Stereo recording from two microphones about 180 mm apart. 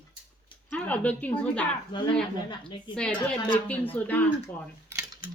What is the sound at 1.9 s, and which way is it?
Speech, 25° left (ahead or behind).